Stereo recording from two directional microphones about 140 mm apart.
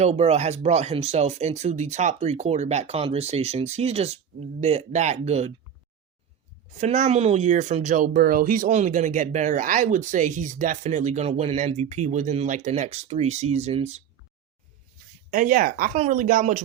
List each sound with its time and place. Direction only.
0.0 s speech: 50° right (ahead or behind)
6.7 s speech: 60° right (ahead or behind)
15.3 s speech: 70° right (ahead or behind)